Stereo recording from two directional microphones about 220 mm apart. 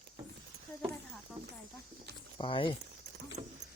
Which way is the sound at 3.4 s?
30° right (ahead or behind).